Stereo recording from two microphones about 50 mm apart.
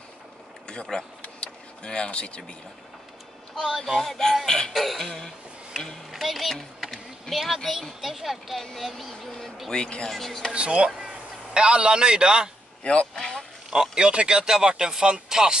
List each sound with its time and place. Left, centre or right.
0.7 s speech: centre
1.2 s vehicle: left
3.6 s speech: centre
4.5 s music: centre
4.7 s speech: centre
6.1 s a sound: centre
8.0 s speech: centre
9.7 s speech: centre
10.0 s speech: centre
10.5 s speech: right
12.8 s speech: centre
13.7 s speech: centre